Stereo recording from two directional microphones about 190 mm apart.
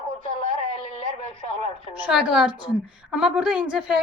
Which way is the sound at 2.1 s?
5° right (ahead or behind).